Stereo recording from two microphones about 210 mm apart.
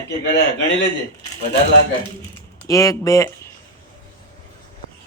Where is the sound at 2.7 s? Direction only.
15° left (ahead or behind).